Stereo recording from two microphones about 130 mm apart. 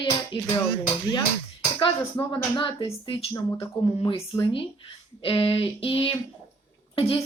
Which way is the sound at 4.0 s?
40° left (ahead or behind).